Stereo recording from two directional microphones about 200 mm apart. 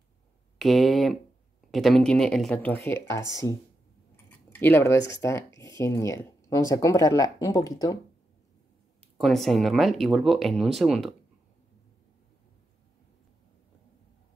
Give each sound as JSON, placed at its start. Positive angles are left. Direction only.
{"t": 0.6, "sound": "speech", "side_deg": 0}
{"t": 4.5, "sound": "speech", "side_deg": 10}
{"t": 9.2, "sound": "speech", "side_deg": 0}